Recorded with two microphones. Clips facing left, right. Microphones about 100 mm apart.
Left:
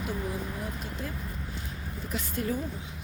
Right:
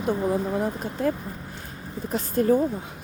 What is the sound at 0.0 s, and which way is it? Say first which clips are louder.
Speech: right 10 dB; 40° right (ahead or behind).